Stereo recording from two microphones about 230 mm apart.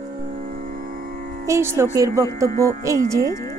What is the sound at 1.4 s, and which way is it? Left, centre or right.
A woman's voice, centre.